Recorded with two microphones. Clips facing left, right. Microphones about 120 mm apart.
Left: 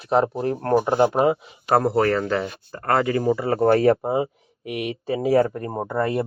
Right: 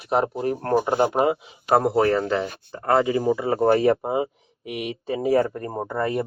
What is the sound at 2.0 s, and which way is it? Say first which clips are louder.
Speech: right 1 dB; 20° right (ahead or behind).